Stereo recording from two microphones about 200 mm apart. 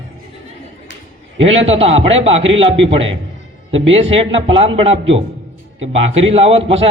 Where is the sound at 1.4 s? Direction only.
30° right (ahead or behind).